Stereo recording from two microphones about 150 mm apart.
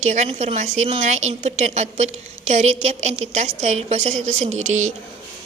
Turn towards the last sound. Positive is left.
turn(degrees=-55)  # may be behind; listen again after turning